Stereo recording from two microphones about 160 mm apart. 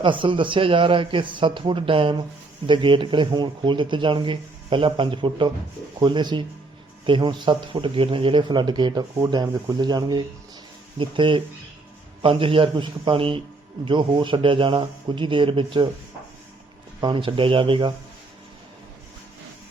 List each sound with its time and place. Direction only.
0.0 s speech: 30° right (ahead or behind)
17.0 s speech: 30° right (ahead or behind)